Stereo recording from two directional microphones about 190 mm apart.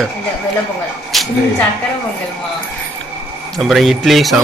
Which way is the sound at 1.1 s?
Centre (ahead or behind).